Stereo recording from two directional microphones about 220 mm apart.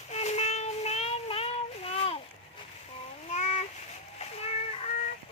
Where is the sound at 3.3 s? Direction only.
30° left (ahead or behind).